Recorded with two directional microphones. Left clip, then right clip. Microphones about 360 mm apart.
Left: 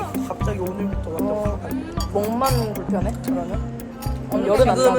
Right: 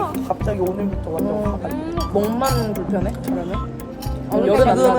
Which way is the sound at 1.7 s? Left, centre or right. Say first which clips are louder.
Right 3 dB; centre.